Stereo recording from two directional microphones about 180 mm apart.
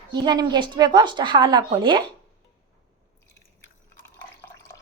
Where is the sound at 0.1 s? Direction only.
20° right (ahead or behind).